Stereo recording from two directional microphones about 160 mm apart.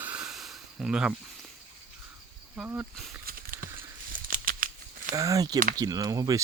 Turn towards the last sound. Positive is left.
turn(degrees=-25)  # may be behind; listen again after turning